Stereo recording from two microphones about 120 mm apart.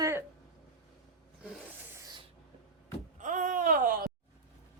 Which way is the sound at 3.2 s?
90° right.